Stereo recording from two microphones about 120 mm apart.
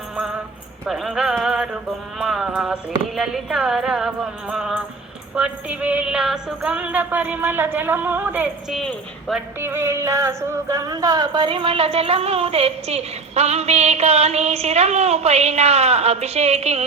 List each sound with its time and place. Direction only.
0.9 s music: 5° right (ahead or behind)
2.5 s a sound: 5° right (ahead or behind)
3.2 s music: 5° right (ahead or behind)
8.7 s music: 5° left (ahead or behind)
9.6 s music: 20° right (ahead or behind); by 16.8 s 60° right (ahead or behind)